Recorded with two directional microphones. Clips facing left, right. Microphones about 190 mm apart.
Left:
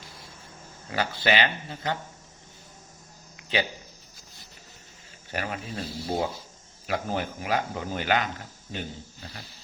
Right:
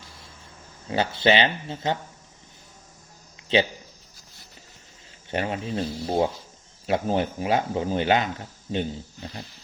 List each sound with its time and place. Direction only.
0.9 s speech: 25° right (ahead or behind)
3.3 s a sound: 25° right (ahead or behind)
5.3 s speech: 25° right (ahead or behind)